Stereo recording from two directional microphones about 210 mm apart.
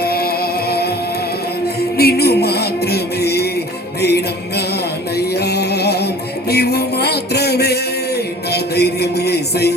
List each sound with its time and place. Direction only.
0.0 s music: 45° left (ahead or behind)
2.0 s music: 50° left (ahead or behind)